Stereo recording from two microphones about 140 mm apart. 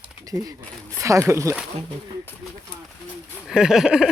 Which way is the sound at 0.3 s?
25° right (ahead or behind).